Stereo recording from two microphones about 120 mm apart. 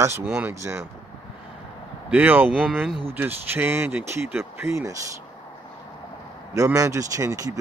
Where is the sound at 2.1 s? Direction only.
15° right (ahead or behind).